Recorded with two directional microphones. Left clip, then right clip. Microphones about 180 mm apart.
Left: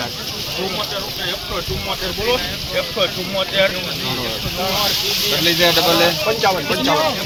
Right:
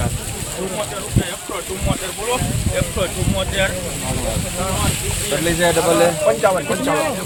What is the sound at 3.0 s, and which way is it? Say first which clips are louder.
Speech: left 3 dB; 35° right (ahead or behind).